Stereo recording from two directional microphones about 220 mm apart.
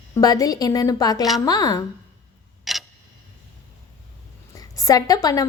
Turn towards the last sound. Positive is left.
turn(degrees=15)  # may be behind; listen again after turning